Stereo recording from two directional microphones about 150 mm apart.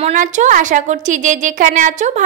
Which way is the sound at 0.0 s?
55° right (ahead or behind).